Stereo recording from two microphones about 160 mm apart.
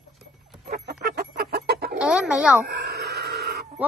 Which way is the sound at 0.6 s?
70° right (ahead or behind).